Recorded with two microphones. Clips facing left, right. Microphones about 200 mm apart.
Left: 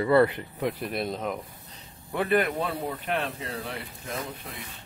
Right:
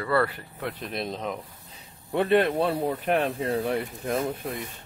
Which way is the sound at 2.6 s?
40° right (ahead or behind).